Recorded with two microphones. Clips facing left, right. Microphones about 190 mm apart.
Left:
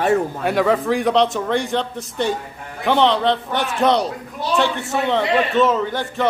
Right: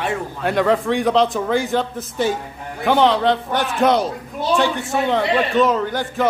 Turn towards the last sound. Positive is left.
turn(degrees=0)  # may be behind; listen again after turning